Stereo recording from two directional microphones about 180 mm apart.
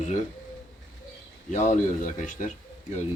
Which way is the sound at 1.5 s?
40° left (ahead or behind).